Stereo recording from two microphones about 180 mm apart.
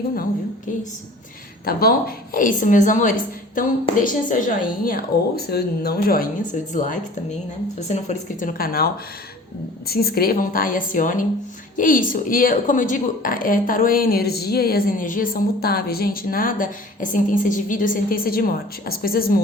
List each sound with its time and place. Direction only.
1.6 s a woman's voice: 55° left (ahead or behind)